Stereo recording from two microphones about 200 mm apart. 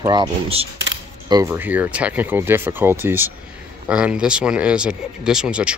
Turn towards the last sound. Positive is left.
turn(degrees=-5)  # may be behind; listen again after turning